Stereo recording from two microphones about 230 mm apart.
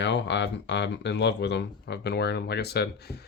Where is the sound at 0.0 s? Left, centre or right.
Left.